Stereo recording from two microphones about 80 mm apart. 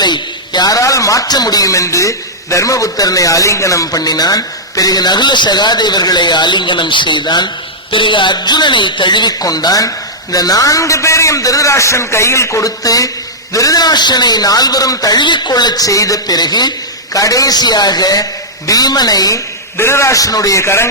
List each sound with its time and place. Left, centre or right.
0.0 s a man's voice: left
15.2 s a man's voice: left
17.2 s a man's voice: left
19.7 s a man's voice: left